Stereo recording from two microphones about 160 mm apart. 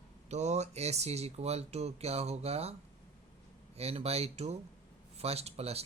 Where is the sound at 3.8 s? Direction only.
40° right (ahead or behind).